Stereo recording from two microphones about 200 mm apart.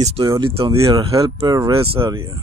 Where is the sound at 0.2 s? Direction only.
20° right (ahead or behind).